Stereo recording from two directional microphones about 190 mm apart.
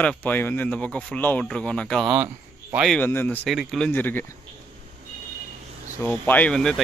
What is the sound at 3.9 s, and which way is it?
Speech, 10° left (ahead or behind).